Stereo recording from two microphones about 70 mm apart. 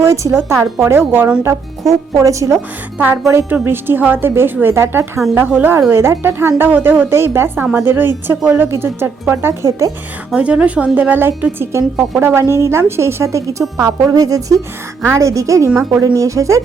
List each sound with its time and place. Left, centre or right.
0.0 s a woman's voice: right
1.5 s speech: right
3.6 s a woman's voice: right
5.5 s a woman's voice: right
5.9 s a woman's voice: right
6.6 s a woman's voice: right
9.6 s speech: right
10.3 s a woman's voice: centre
11.7 s a woman's voice: right
14.1 s a woman's voice: right
15.7 s a woman's voice: right
16.0 s speech: right